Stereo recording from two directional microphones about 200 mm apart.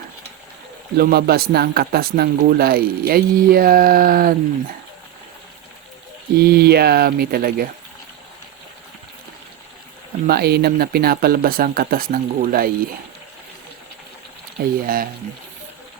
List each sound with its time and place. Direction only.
0.9 s speech: 50° right (ahead or behind)
6.3 s speech: 50° right (ahead or behind)
10.2 s speech: 50° right (ahead or behind)
14.6 s speech: 45° right (ahead or behind)